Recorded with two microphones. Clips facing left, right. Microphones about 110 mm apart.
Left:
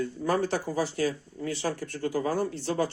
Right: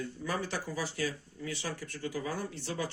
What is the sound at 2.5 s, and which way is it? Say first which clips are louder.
Speech: left 8 dB; 35° left (ahead or behind).